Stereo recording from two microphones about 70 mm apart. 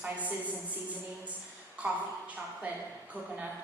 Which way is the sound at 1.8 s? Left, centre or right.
Right.